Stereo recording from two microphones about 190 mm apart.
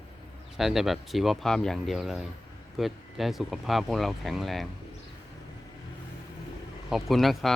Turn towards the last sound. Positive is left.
turn(degrees=0)  # may be behind; listen again after turning